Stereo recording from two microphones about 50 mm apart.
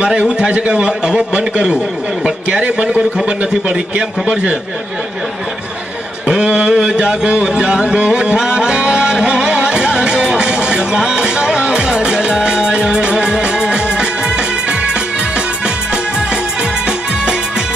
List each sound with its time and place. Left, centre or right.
0.0 s a man's voice: right
6.4 s a sound: right
6.7 s music: centre